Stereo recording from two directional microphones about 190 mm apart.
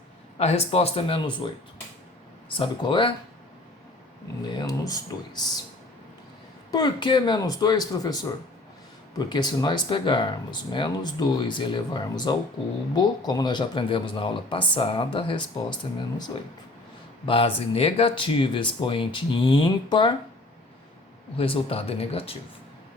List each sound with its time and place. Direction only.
0.3 s speech: 35° left (ahead or behind)
2.6 s speech: 25° left (ahead or behind)
4.5 s speech: 20° left (ahead or behind)
6.7 s speech: 20° left (ahead or behind)
21.3 s speech: 30° left (ahead or behind)